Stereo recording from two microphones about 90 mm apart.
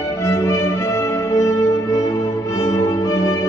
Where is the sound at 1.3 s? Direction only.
40° left (ahead or behind).